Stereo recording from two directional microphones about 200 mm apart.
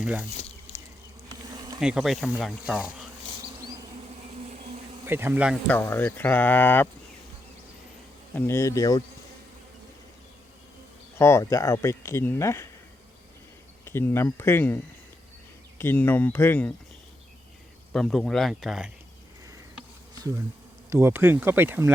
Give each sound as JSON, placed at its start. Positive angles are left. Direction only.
{"t": 0.0, "sound": "speech", "side_deg": -5}
{"t": 0.7, "sound": "bee", "side_deg": 30}
{"t": 1.3, "sound": "bee", "side_deg": -20}
{"t": 1.8, "sound": "speech", "side_deg": -5}
{"t": 4.4, "sound": "a sound", "side_deg": -35}
{"t": 5.0, "sound": "speech", "side_deg": -10}
{"t": 5.6, "sound": "speech", "side_deg": 10}
{"t": 8.4, "sound": "speech", "side_deg": 10}
{"t": 11.2, "sound": "speech", "side_deg": 15}
{"t": 13.8, "sound": "speech", "side_deg": 10}
{"t": 15.8, "sound": "speech", "side_deg": 10}
{"t": 17.9, "sound": "speech", "side_deg": 0}
{"t": 20.9, "sound": "speech", "side_deg": -10}